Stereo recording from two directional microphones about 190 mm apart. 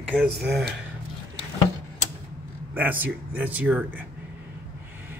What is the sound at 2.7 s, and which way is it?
Speech, 10° right (ahead or behind).